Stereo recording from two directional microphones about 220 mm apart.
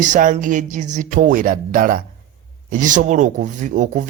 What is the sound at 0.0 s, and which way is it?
Speech, 35° right (ahead or behind).